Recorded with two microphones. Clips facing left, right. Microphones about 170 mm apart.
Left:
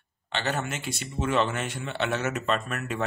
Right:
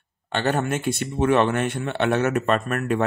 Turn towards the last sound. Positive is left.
turn(degrees=-55)  # may be behind; listen again after turning